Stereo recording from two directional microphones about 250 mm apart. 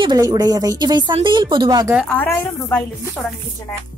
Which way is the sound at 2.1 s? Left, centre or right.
Centre.